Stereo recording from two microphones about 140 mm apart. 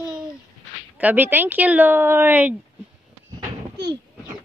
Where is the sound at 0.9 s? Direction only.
10° right (ahead or behind).